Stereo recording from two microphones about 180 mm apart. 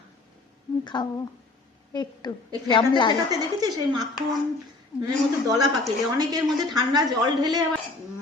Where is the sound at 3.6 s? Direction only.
20° right (ahead or behind).